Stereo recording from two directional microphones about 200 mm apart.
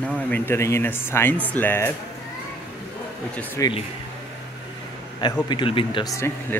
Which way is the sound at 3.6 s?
25° left (ahead or behind).